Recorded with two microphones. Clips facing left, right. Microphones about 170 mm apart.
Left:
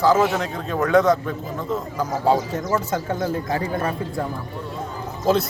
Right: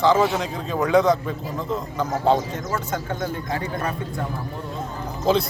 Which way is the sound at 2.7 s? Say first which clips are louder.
Left 4 dB; 30° left (ahead or behind).